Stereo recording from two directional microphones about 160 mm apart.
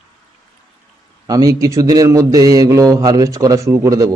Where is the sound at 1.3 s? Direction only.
20° right (ahead or behind).